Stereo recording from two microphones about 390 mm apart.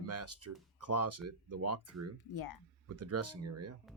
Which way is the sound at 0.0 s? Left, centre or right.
Right.